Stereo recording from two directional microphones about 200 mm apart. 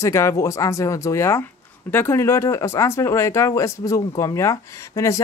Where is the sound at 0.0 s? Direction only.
15° left (ahead or behind).